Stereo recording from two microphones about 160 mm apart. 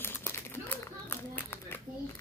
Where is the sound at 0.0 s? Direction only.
15° left (ahead or behind).